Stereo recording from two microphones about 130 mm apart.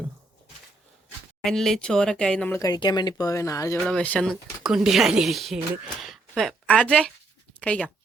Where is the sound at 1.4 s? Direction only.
5° left (ahead or behind).